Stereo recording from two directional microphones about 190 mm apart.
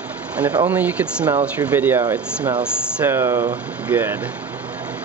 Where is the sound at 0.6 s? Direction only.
10° right (ahead or behind).